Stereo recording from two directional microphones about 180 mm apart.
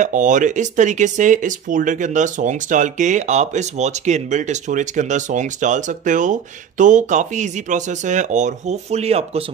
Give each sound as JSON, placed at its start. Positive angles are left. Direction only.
{"t": 0.0, "sound": "speech", "side_deg": -45}